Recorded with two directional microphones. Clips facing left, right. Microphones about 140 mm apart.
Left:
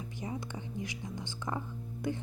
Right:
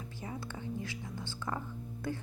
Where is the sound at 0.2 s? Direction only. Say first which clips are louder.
Left 2 dB; 20° left (ahead or behind).